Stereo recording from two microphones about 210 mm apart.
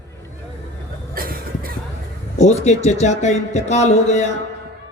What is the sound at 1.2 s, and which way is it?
Cough, 45° right (ahead or behind).